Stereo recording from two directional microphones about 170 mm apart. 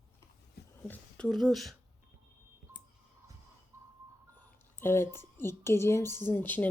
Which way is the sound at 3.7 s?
15° right (ahead or behind).